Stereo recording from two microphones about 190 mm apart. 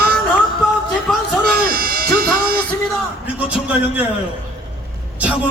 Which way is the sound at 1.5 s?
50° right (ahead or behind).